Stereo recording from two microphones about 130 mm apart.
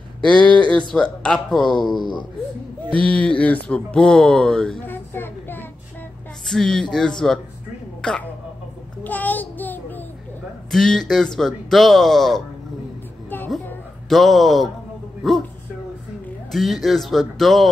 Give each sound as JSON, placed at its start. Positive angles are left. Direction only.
{"t": 0.2, "sound": "speech", "side_deg": 10}
{"t": 2.0, "sound": "speech", "side_deg": 35}
{"t": 2.9, "sound": "speech", "side_deg": 10}
{"t": 4.8, "sound": "speech", "side_deg": 15}
{"t": 6.4, "sound": "speech", "side_deg": 5}
{"t": 9.0, "sound": "child singing", "side_deg": 15}
{"t": 10.7, "sound": "speech", "side_deg": 5}
{"t": 14.0, "sound": "speech", "side_deg": 0}
{"t": 16.5, "sound": "speech", "side_deg": 0}